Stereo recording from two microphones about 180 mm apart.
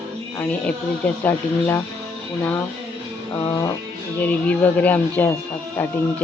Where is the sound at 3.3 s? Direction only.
20° left (ahead or behind).